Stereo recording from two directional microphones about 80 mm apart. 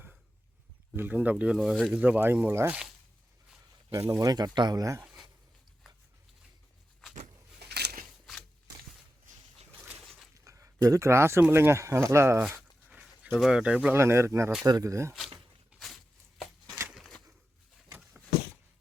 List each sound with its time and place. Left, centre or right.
0.9 s speech: right
1.5 s speech: centre
1.9 s speech: centre
3.9 s speech: right
4.8 s speech: right
10.4 s a sound: right
10.8 s speech: right
12.9 s a sound: centre
13.4 s speech: centre
13.9 s speech: right
16.9 s a sound: centre